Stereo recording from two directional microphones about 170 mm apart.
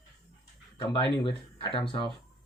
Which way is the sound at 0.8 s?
25° left (ahead or behind).